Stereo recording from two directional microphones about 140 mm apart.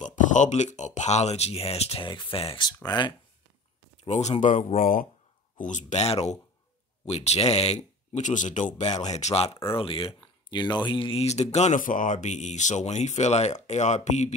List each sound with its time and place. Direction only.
0.0 s speech: 65° left (ahead or behind); by 3.1 s 30° left (ahead or behind)
4.0 s speech: 55° left (ahead or behind)
4.7 s speech: 90° left
5.6 s speech: 60° left (ahead or behind)